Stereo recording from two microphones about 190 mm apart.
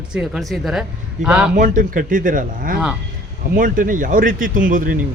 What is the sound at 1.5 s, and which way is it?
Speech, 45° right (ahead or behind).